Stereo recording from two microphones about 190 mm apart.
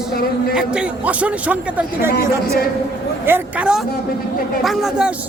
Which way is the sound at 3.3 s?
10° right (ahead or behind).